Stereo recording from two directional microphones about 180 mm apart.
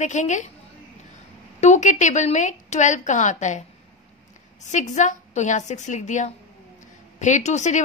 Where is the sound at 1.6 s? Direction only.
40° left (ahead or behind).